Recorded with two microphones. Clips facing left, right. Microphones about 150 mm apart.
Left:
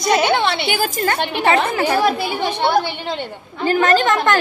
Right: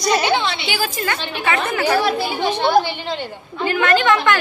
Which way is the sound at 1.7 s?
30° left (ahead or behind).